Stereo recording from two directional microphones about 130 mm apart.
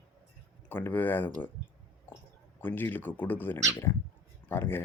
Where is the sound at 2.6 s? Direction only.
15° left (ahead or behind).